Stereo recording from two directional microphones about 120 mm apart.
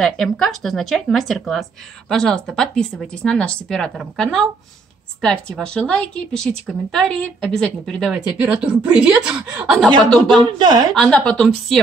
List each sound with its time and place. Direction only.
0.0 s a woman's voice: centre (ahead or behind)
9.8 s speech: 35° right (ahead or behind)
11.0 s a woman's voice: 10° left (ahead or behind)